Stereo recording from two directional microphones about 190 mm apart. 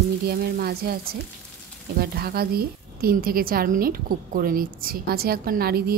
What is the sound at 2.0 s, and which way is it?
A woman's voice, 55° right (ahead or behind).